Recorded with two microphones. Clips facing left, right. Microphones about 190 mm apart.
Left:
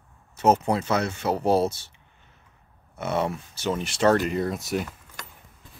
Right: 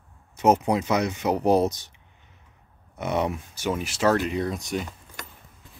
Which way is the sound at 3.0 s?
15° right (ahead or behind).